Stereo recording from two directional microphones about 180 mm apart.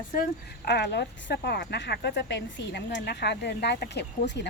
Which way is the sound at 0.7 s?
70° left (ahead or behind).